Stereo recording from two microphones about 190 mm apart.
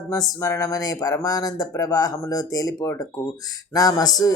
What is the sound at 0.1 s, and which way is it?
Speech, 20° left (ahead or behind).